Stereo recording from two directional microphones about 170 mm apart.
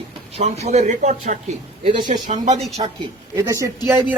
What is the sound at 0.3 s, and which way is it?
A man's voice, 40° right (ahead or behind).